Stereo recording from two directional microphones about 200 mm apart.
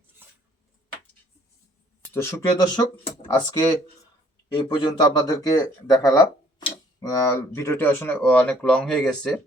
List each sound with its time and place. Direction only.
0.2 s dishes: 10° right (ahead or behind)
2.1 s speech: 15° left (ahead or behind)